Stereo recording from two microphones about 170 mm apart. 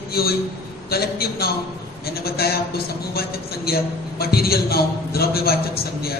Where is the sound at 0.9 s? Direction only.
65° left (ahead or behind).